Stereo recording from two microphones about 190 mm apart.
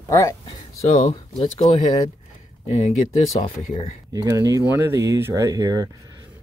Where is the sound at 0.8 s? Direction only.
35° left (ahead or behind).